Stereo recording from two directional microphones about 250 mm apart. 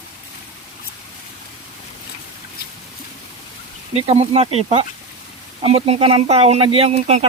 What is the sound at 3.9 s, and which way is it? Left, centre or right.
Speech, right.